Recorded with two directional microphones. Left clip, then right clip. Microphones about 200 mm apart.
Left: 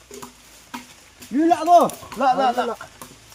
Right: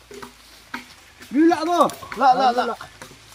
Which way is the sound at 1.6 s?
35° left (ahead or behind).